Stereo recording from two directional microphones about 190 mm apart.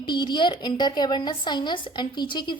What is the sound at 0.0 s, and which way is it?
A woman's voice, 25° left (ahead or behind).